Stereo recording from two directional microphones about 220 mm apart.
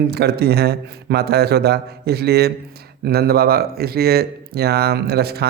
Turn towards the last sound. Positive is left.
turn(degrees=-45)  # may be behind; listen again after turning